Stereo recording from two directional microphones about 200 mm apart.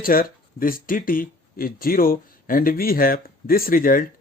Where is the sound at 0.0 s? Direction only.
45° left (ahead or behind).